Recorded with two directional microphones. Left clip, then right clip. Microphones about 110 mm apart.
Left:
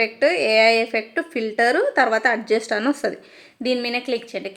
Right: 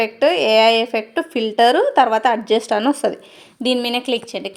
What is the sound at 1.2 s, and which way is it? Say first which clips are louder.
Speech: right 4 dB; 40° left (ahead or behind).